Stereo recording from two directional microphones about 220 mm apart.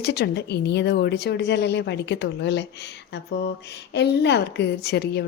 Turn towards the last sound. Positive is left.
turn(degrees=50)  # may be behind; listen again after turning